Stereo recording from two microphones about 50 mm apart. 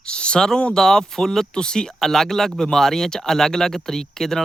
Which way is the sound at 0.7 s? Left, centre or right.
Centre.